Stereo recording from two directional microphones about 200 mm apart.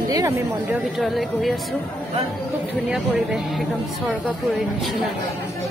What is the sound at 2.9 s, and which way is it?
Speech, centre (ahead or behind).